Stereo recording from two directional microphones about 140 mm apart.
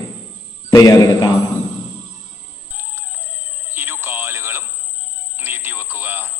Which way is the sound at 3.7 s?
15° right (ahead or behind).